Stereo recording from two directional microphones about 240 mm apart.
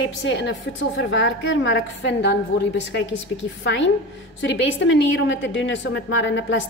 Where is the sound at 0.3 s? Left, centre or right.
Left.